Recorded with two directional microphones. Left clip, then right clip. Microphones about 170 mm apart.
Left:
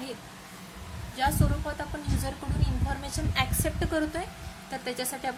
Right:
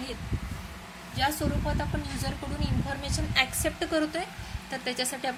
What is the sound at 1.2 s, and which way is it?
Speech, 10° right (ahead or behind).